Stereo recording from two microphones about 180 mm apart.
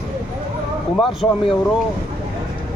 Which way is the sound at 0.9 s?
Centre (ahead or behind).